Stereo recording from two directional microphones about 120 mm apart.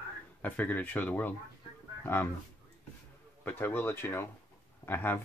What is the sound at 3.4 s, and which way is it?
Speech, 15° left (ahead or behind).